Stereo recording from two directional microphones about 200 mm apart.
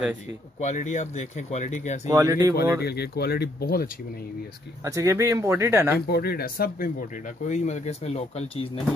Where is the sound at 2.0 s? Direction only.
20° right (ahead or behind).